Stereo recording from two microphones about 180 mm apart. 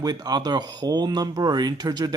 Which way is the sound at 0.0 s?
20° right (ahead or behind).